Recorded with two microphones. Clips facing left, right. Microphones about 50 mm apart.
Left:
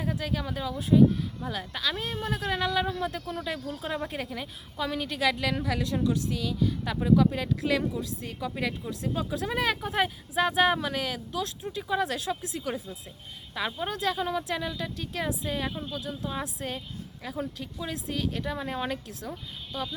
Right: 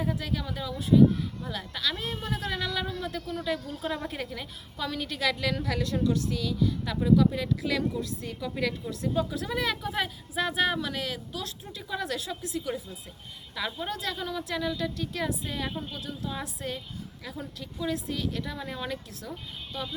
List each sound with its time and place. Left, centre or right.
0.1 s a woman's voice: left
3.7 s a woman's voice: centre
6.3 s a woman's voice: left
10.3 s a woman's voice: left
13.5 s speech: centre
16.6 s a woman's voice: left
18.9 s a woman's voice: left